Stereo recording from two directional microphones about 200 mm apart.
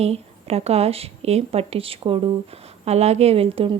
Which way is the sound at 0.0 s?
30° right (ahead or behind).